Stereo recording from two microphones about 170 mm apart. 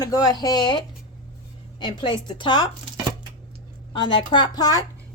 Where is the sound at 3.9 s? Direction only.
30° left (ahead or behind).